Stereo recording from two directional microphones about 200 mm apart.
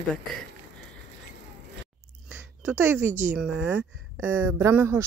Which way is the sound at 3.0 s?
40° right (ahead or behind).